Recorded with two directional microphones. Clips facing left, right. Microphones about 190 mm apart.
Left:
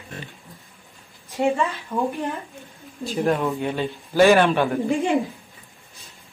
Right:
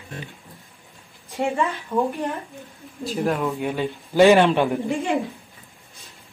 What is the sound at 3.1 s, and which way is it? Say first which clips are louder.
Speech: left 1 dB; centre (ahead or behind).